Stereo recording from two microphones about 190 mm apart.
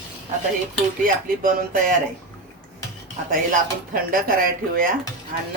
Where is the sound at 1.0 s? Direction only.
45° right (ahead or behind).